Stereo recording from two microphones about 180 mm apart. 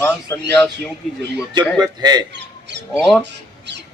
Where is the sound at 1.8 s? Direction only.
20° right (ahead or behind).